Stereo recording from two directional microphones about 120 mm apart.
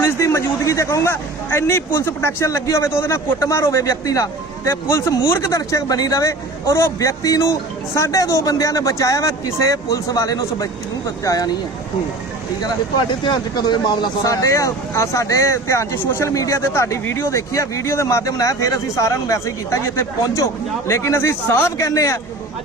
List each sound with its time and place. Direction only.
0.0 s speech: 25° left (ahead or behind)
12.6 s speech: 35° left (ahead or behind)